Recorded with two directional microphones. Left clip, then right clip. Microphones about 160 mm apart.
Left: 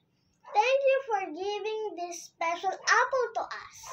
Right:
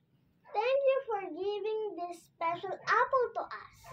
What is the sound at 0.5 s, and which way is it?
A child's voice, 25° left (ahead or behind).